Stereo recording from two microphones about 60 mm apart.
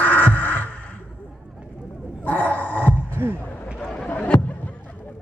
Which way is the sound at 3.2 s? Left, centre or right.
Right.